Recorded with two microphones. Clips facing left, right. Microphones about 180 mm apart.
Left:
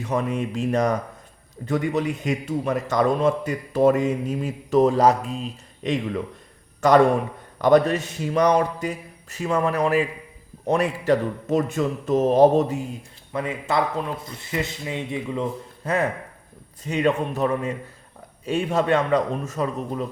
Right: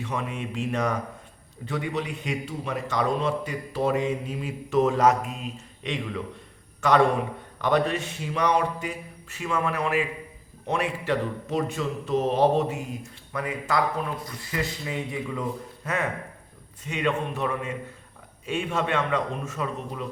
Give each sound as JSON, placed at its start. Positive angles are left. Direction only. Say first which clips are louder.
{"t": 0.0, "sound": "a man's voice", "louder": "left 7 dB", "side_deg": 40}
{"t": 13.3, "sound": "a man's voice", "louder": "left 3 dB", "side_deg": 25}